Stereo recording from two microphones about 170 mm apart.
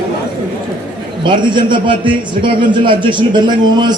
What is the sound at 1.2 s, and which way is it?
A man's voice, 25° right (ahead or behind).